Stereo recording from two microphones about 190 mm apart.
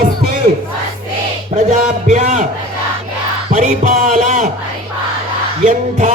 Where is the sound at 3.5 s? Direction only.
40° right (ahead or behind).